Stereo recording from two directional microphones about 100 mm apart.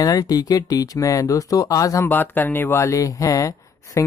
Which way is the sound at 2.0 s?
20° left (ahead or behind).